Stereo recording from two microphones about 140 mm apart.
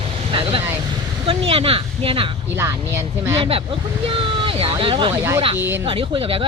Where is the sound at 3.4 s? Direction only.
40° right (ahead or behind).